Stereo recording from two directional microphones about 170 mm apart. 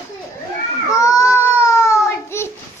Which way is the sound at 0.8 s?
20° left (ahead or behind).